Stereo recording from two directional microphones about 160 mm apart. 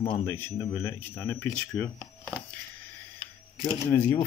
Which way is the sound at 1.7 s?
5° left (ahead or behind).